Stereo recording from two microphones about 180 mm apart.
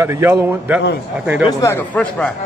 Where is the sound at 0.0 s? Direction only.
10° right (ahead or behind).